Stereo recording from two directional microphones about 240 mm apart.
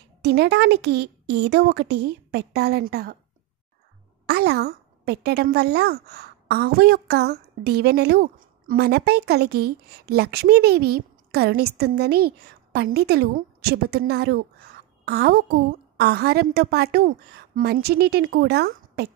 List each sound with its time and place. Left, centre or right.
0.2 s a woman's voice: right
4.3 s a woman's voice: right